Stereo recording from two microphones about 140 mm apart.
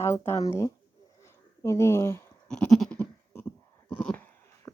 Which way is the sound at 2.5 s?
5° left (ahead or behind).